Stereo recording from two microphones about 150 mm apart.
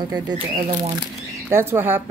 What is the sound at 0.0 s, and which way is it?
Speech, 30° right (ahead or behind).